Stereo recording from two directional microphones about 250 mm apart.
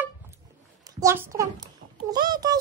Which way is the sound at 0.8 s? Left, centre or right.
Centre.